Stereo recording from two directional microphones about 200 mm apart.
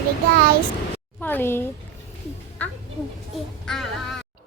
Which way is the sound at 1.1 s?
10° left (ahead or behind).